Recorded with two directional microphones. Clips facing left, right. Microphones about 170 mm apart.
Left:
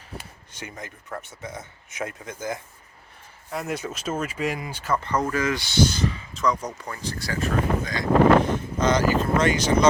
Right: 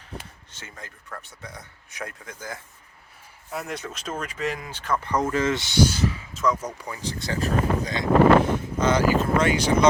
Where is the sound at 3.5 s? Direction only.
5° left (ahead or behind).